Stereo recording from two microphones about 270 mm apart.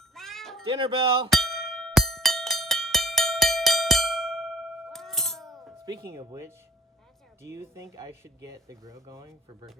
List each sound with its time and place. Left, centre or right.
0.1 s cat: centre
0.6 s speech: centre
1.3 s a sound: centre
5.7 s speech: centre